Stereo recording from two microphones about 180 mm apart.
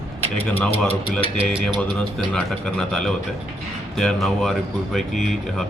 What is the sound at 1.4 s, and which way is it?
Speech, 5° right (ahead or behind).